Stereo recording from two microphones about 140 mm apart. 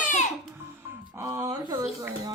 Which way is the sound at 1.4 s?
30° right (ahead or behind).